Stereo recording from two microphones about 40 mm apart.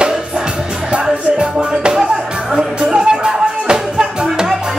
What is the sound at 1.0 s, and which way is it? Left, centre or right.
Music, centre.